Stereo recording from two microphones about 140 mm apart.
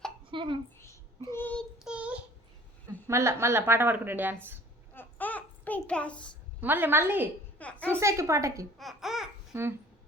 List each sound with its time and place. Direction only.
0.3 s a sound: 35° right (ahead or behind)
1.3 s child singing: 15° left (ahead or behind)
1.8 s child singing: 5° right (ahead or behind)
3.1 s a woman's voice: 20° right (ahead or behind)
4.9 s a sound: 10° left (ahead or behind)
6.6 s a woman's voice: 15° right (ahead or behind)
7.6 s a woman's voice: 10° left (ahead or behind)
7.9 s a woman's voice: 20° right (ahead or behind)
8.8 s speech: centre (ahead or behind)
9.5 s speech: 15° right (ahead or behind)